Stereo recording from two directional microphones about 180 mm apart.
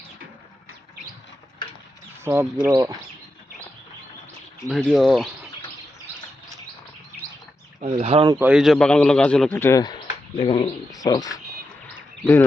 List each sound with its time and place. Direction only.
2.2 s speech: 15° right (ahead or behind)
4.7 s speech: centre (ahead or behind)
7.8 s speech: 35° right (ahead or behind)
8.4 s a man's voice: 5° right (ahead or behind); by 11.3 s 20° left (ahead or behind)
12.2 s a man's voice: 10° left (ahead or behind)